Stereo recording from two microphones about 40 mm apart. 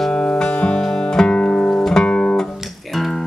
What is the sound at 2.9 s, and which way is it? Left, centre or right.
Music, centre.